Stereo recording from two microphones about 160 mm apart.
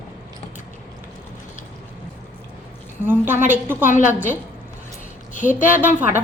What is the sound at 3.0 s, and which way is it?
A woman's voice, 15° right (ahead or behind).